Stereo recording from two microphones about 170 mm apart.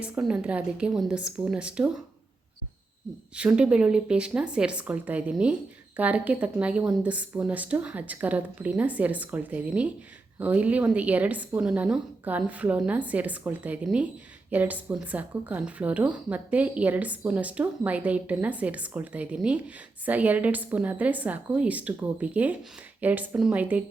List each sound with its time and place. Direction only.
0.0 s speech: 5° right (ahead or behind)
3.3 s speech: 5° right (ahead or behind)